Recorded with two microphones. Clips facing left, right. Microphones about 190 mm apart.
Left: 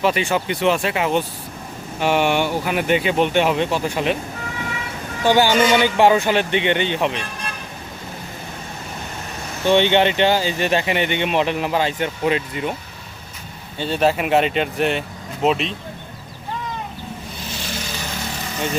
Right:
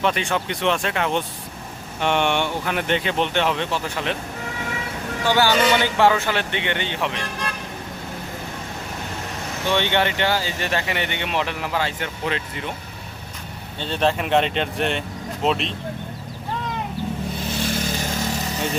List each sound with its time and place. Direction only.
0.0 s speech: 5° left (ahead or behind)
5.2 s speech: 15° left (ahead or behind)
9.6 s speech: 20° left (ahead or behind)
13.7 s speech: 10° left (ahead or behind)
17.5 s vehicle: 50° right (ahead or behind)